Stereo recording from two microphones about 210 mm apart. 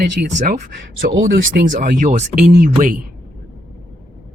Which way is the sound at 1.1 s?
65° right (ahead or behind).